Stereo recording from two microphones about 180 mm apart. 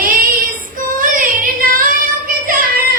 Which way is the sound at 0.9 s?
50° right (ahead or behind).